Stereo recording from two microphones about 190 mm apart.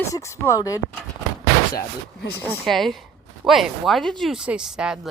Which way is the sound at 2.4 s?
Centre (ahead or behind).